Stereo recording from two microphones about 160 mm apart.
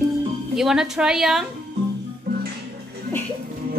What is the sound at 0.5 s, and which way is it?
Speech, 5° right (ahead or behind).